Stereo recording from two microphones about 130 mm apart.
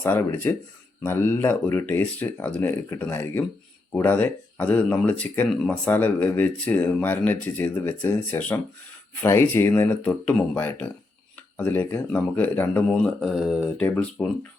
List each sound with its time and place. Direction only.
0.0 s speech: 20° left (ahead or behind)
13.2 s speech: 5° right (ahead or behind)
13.7 s speech: 10° left (ahead or behind)